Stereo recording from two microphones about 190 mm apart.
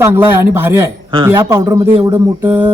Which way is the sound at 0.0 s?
10° right (ahead or behind).